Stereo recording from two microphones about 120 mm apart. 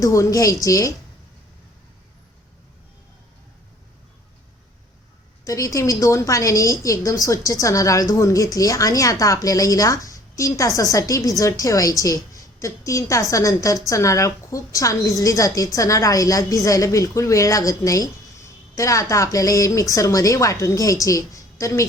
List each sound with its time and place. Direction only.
0.0 s a woman's voice: 25° left (ahead or behind)
5.5 s a woman's voice: 25° left (ahead or behind)